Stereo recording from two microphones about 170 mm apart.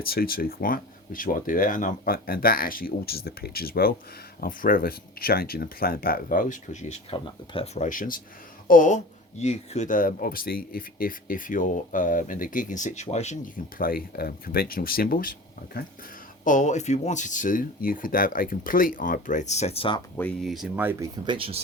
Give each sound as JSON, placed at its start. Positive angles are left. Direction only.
{"t": 0.0, "sound": "speech", "side_deg": 60}
{"t": 7.1, "sound": "speech", "side_deg": 35}
{"t": 7.8, "sound": "speech", "side_deg": 50}
{"t": 20.1, "sound": "speech", "side_deg": 10}
{"t": 20.5, "sound": "speech", "side_deg": -5}
{"t": 21.2, "sound": "speech", "side_deg": -30}